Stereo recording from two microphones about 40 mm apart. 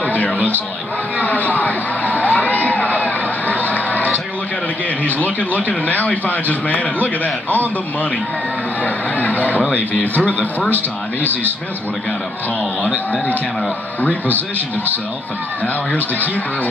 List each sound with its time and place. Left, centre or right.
0.0 s a sound: left
1.1 s crowd: left
5.0 s a man's voice: left
8.8 s a man's voice: left
15.6 s speech: left